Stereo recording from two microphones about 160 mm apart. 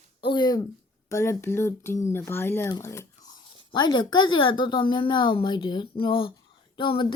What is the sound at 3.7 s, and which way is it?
A woman's voice, 25° left (ahead or behind).